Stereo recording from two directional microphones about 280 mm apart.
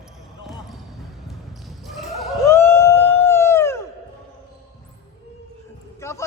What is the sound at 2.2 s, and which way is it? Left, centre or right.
Vehicle, centre.